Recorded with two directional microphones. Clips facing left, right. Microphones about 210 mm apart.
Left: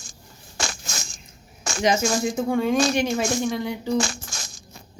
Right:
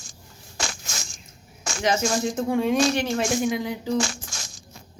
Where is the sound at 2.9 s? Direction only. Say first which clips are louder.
Left 2 dB; 15° left (ahead or behind).